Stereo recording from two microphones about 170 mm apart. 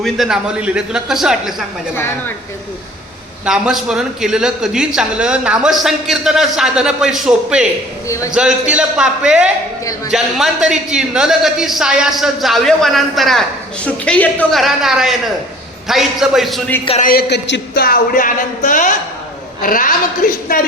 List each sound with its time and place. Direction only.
0.0 s speech: centre (ahead or behind)
2.0 s speech: 15° left (ahead or behind)
3.4 s speech: 5° right (ahead or behind)
8.0 s a man's voice: 20° left (ahead or behind)
8.3 s speech: 5° right (ahead or behind)
17.0 s speech: 60° left (ahead or behind)